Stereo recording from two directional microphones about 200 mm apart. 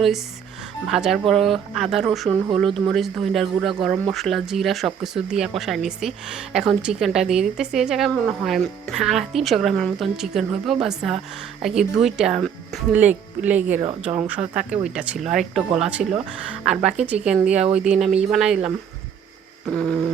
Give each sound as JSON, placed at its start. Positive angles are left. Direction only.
{"t": 0.9, "sound": "speech", "side_deg": 0}
{"t": 16.0, "sound": "speech", "side_deg": -40}
{"t": 16.5, "sound": "speech", "side_deg": -5}